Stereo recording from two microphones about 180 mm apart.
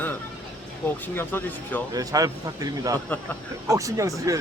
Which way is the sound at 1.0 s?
10° left (ahead or behind).